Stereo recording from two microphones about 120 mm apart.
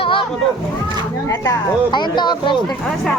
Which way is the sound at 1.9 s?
40° left (ahead or behind).